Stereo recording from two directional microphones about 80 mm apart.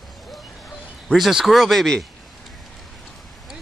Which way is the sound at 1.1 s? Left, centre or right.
Centre.